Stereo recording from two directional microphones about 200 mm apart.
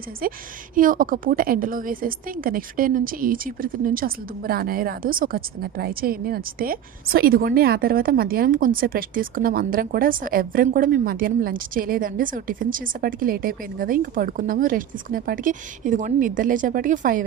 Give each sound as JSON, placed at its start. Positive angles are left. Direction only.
{"t": 0.8, "sound": "a woman's voice", "side_deg": -45}